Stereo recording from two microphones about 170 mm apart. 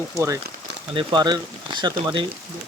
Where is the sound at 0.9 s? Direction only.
25° right (ahead or behind).